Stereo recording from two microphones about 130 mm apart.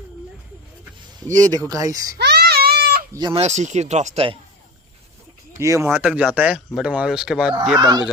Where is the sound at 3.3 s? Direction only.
55° right (ahead or behind).